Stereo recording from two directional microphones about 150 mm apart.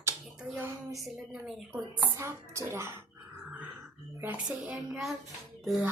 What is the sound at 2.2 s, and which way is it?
Speech, 20° right (ahead or behind).